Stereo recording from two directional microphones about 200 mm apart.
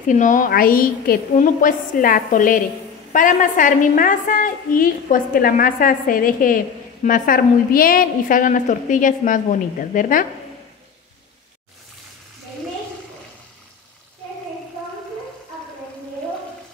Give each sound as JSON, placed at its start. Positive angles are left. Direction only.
{"t": 0.0, "sound": "a woman's voice", "side_deg": 40}